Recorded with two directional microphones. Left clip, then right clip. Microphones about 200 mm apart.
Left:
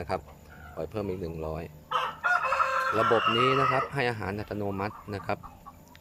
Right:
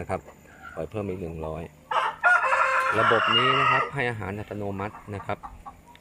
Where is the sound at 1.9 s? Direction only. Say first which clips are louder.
Right 6 dB; 30° right (ahead or behind).